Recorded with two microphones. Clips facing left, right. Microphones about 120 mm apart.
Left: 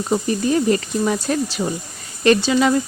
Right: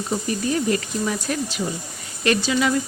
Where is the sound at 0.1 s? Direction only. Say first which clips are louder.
Left 5 dB; 30° left (ahead or behind).